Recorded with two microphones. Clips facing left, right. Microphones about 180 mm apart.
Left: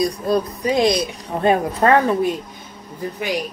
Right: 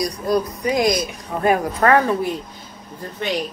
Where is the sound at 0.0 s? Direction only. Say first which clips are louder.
Left 1 dB; 25° left (ahead or behind).